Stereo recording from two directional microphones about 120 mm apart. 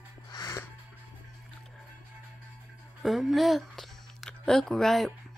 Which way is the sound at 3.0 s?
Centre (ahead or behind).